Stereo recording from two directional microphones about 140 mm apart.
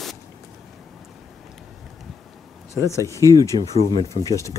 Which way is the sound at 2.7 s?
20° left (ahead or behind).